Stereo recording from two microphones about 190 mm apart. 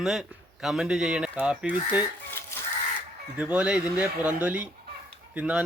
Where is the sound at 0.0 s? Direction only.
Centre (ahead or behind).